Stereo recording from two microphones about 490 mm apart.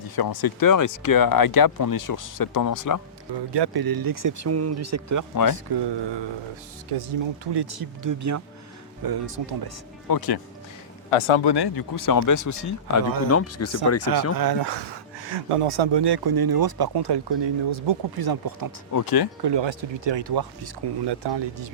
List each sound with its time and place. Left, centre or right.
0.2 s speech: left
3.5 s speech: right
5.6 s speech: right
6.9 s speech: right
7.5 s speech: right
9.0 s speech: right
10.1 s speech: left
11.1 s speech: left
11.4 s speech: left
14.3 s speech: right
18.2 s speech: right
18.9 s speech: left
19.4 s speech: right